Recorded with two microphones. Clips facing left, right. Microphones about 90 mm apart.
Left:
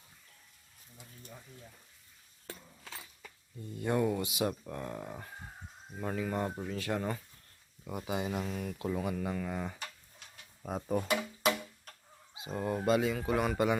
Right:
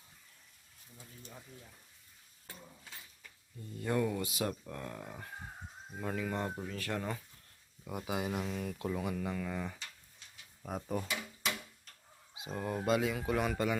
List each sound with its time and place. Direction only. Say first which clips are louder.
2.5 s a sound: left 4 dB; 90° left
3.8 s speech: left 3 dB; 20° left (ahead or behind)
7.9 s speech: left 1 dB; centre (ahead or behind); by 9.7 s 15° left (ahead or behind)
9.7 s a sound: left 5 dB; 55° left (ahead or behind)
10.6 s speech: left 3 dB; 20° left (ahead or behind)
10.9 s music: left 8 dB; 60° left (ahead or behind)
12.3 s fowl: left 2 dB; centre (ahead or behind)
12.5 s speech: left 3 dB; 15° left (ahead or behind)
12.8 s speech: left 2 dB; centre (ahead or behind)